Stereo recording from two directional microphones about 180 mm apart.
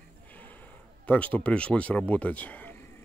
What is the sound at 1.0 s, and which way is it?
Speech, 10° left (ahead or behind).